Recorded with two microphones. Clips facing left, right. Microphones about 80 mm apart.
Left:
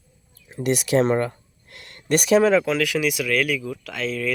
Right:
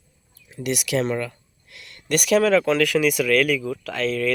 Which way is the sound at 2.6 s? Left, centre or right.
Centre.